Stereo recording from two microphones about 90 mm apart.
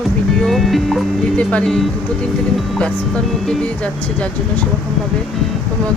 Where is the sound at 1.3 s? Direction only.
15° left (ahead or behind).